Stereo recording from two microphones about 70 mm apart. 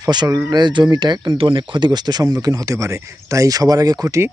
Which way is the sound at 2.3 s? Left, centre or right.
Right.